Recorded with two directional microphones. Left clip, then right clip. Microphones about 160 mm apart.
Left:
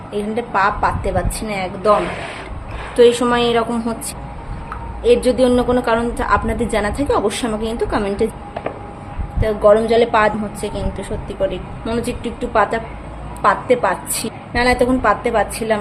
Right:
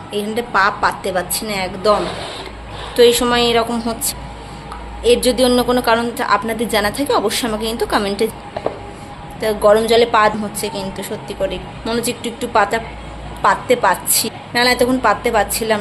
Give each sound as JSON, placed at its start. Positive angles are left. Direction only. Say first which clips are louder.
{"t": 0.1, "sound": "a woman's voice", "louder": "right 1 dB", "side_deg": 10}
{"t": 2.9, "sound": "a woman's voice", "louder": "even", "side_deg": 15}
{"t": 5.0, "sound": "a woman's voice", "louder": "even", "side_deg": 10}
{"t": 9.4, "sound": "a woman's voice", "louder": "even", "side_deg": 10}